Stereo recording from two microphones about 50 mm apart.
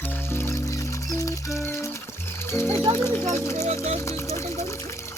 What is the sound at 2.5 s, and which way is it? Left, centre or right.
Speech, left.